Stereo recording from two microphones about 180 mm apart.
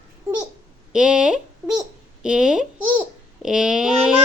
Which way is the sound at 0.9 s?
5° right (ahead or behind).